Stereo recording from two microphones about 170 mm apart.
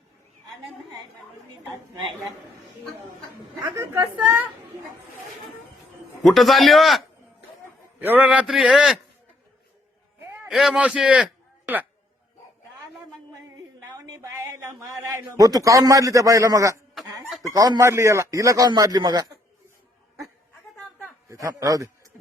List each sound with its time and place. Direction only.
3.7 s a man's voice: 10° right (ahead or behind)
6.2 s a man's voice: centre (ahead or behind)
10.5 s a man's voice: centre (ahead or behind)
14.0 s a sound: 20° right (ahead or behind)
15.3 s a man's voice: 20° right (ahead or behind)
21.2 s a man's voice: 20° right (ahead or behind)